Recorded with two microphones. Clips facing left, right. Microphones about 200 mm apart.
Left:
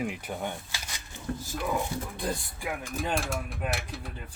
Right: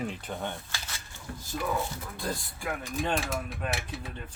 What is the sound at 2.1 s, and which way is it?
Speech, 15° left (ahead or behind).